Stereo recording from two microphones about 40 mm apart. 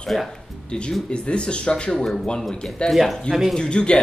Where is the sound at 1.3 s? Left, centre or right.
Left.